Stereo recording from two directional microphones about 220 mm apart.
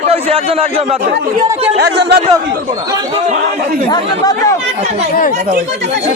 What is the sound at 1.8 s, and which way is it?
Speech, 50° right (ahead or behind).